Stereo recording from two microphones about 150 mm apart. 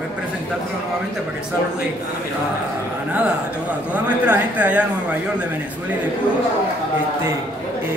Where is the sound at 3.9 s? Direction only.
10° right (ahead or behind).